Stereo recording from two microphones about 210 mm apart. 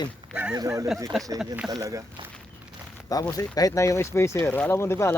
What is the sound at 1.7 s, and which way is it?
Speech, 15° right (ahead or behind).